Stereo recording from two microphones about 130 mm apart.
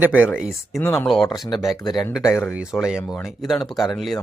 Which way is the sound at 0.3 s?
5° right (ahead or behind).